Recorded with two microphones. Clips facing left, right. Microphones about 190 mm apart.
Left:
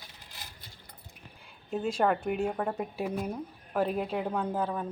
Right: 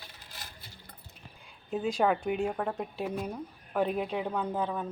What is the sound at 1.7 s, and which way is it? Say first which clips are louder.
A woman's voice: even; centre (ahead or behind).